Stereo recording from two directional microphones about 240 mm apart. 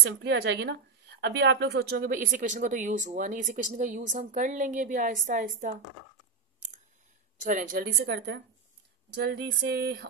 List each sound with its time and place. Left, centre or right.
0.0 s a woman's voice: right
7.4 s a woman's voice: right
9.1 s a sound: right